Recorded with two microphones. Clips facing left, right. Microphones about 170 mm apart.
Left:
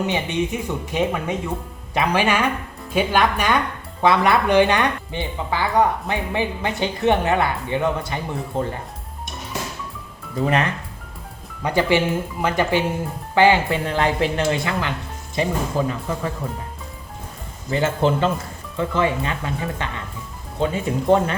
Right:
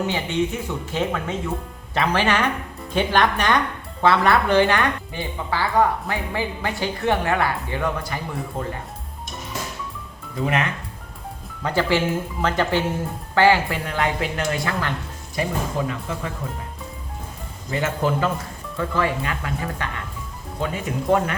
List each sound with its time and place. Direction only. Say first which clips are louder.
0.0 s speech: left 1 dB; 15° left (ahead or behind)
10.4 s speech: left 3 dB; 35° left (ahead or behind)
11.6 s speech: left 2 dB; 15° left (ahead or behind); by 15.9 s 35° left (ahead or behind)
17.7 s speech: left 3 dB; 30° left (ahead or behind)